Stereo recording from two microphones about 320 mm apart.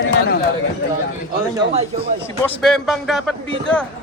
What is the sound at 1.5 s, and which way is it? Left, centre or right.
Speech, centre.